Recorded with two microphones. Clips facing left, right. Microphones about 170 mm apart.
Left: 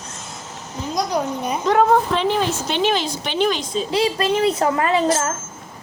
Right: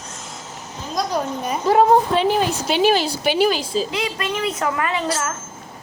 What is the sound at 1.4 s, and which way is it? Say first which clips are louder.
A woman's voice: right 2 dB; centre (ahead or behind).